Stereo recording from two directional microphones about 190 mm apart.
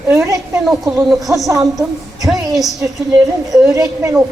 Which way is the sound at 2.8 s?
20° right (ahead or behind).